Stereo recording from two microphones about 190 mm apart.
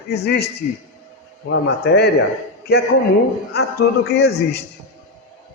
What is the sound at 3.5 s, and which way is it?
A man's voice, 60° left (ahead or behind).